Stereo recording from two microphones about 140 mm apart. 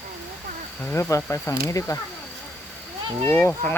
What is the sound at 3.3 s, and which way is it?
Speech, 15° left (ahead or behind).